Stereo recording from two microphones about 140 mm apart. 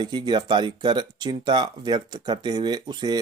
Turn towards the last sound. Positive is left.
turn(degrees=-30)  # may be behind; listen again after turning